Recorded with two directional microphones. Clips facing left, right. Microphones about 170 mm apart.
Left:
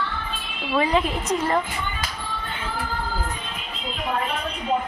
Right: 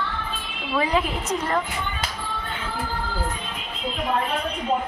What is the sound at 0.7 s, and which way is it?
Speech, centre (ahead or behind).